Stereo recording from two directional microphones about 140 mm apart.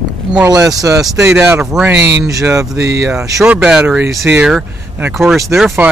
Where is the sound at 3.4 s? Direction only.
5° right (ahead or behind).